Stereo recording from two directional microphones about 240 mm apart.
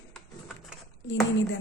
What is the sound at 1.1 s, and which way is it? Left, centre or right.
Speech, left.